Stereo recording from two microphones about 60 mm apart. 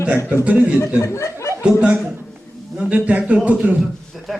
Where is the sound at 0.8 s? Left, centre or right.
Left.